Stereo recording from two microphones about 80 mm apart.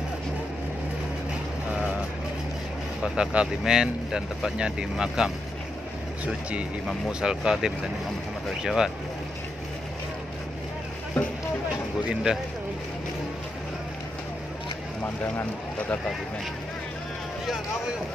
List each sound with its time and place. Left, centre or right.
1.7 s vehicle: centre
3.0 s speech: centre
7.1 s speech: centre
12.1 s speech: centre
15.2 s speech: centre